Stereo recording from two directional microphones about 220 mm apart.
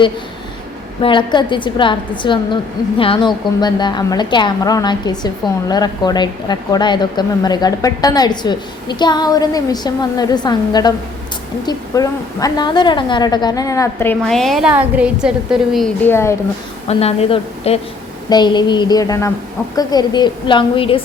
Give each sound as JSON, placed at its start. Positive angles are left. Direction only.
{"t": 1.0, "sound": "a woman's voice", "side_deg": 20}
{"t": 16.9, "sound": "a woman's voice", "side_deg": 25}